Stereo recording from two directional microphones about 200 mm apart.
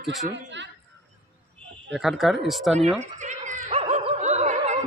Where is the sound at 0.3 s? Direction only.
65° right (ahead or behind).